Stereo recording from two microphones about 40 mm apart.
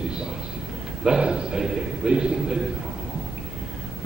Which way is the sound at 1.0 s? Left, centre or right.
Right.